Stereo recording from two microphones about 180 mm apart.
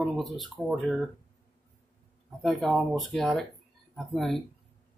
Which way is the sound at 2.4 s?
Centre (ahead or behind).